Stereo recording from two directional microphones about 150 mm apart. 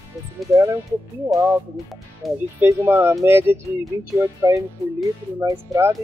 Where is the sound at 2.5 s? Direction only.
15° right (ahead or behind).